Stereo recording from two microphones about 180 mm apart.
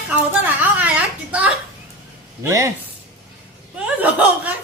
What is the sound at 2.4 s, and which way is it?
Speech, 15° right (ahead or behind).